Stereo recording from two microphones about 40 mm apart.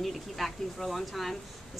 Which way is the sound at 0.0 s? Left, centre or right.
Centre.